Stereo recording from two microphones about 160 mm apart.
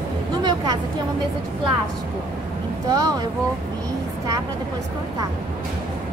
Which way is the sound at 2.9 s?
25° right (ahead or behind).